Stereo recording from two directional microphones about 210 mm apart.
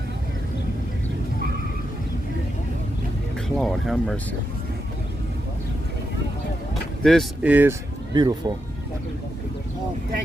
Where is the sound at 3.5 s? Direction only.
Centre (ahead or behind).